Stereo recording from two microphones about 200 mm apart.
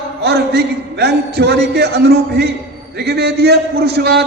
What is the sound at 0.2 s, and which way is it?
A man's voice, 55° right (ahead or behind).